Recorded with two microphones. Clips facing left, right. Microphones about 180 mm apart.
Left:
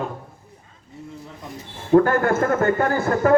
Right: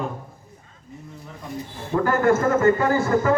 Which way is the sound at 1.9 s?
60° left (ahead or behind).